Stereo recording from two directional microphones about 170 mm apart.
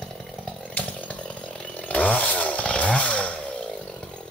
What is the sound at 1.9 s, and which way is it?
Chainsaw, 10° left (ahead or behind).